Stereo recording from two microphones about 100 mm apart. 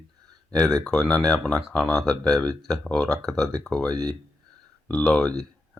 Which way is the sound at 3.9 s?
40° right (ahead or behind).